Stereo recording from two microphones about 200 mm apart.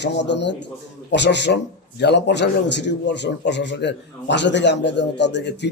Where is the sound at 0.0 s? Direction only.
60° left (ahead or behind).